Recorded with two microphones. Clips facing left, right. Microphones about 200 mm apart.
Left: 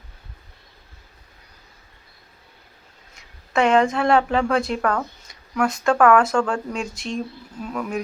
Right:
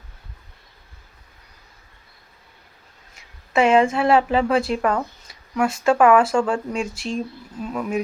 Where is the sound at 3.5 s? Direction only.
5° right (ahead or behind).